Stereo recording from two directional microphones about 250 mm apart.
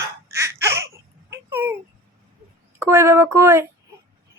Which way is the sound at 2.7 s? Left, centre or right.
Centre.